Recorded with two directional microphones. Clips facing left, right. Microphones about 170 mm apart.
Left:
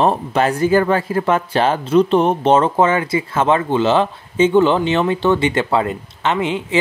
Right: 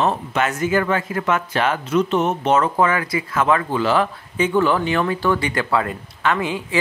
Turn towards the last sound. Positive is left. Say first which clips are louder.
# left 2 dB
turn(degrees=25)  # may be behind; listen again after turning